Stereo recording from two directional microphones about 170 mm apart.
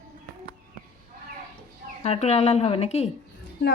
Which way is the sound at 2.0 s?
40° left (ahead or behind).